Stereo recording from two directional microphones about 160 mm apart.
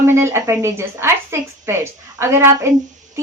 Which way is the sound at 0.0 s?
15° right (ahead or behind).